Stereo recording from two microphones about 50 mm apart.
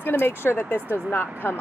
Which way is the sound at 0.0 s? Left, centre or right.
Left.